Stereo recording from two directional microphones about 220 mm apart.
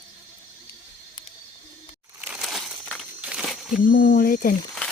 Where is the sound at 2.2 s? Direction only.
Centre (ahead or behind).